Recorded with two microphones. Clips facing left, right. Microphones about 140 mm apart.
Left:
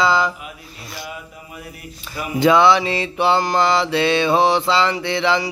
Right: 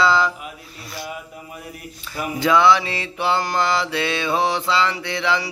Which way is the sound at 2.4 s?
25° left (ahead or behind).